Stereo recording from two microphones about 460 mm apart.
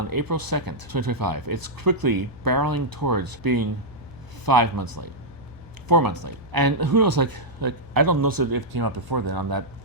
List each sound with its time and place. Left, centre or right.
0.0 s speech: right